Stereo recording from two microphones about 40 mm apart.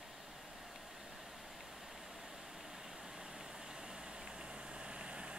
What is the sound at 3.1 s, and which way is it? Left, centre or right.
Vehicle, centre.